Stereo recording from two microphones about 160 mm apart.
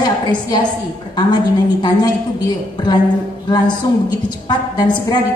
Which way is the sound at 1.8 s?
25° left (ahead or behind).